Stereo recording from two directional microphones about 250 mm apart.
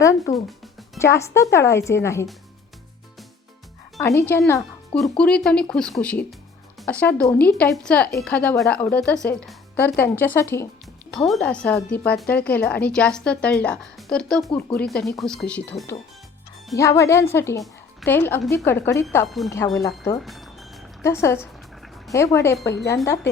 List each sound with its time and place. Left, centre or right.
0.3 s music: centre
0.9 s a woman's voice: centre
4.0 s a woman's voice: centre
20.2 s music: centre
21.0 s a woman's voice: centre
22.6 s speech: left
23.0 s a woman's voice: centre